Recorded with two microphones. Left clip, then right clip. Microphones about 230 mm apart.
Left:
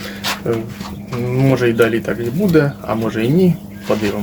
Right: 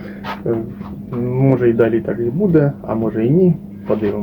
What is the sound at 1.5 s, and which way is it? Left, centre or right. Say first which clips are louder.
Speech: even; centre.